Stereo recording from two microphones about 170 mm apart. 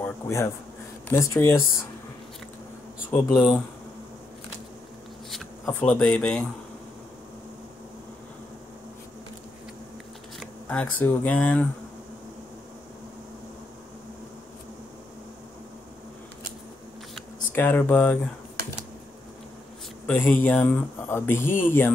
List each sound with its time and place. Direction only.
0.0 s a sound: 15° left (ahead or behind)
1.0 s speech: 15° left (ahead or behind)
3.1 s speech: 5° left (ahead or behind)
5.7 s speech: 10° left (ahead or behind)
10.4 s speech: 5° left (ahead or behind)
17.1 s speech: 10° left (ahead or behind)
20.1 s speech: 10° left (ahead or behind)